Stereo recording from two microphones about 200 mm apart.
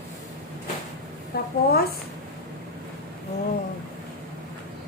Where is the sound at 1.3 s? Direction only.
55° left (ahead or behind).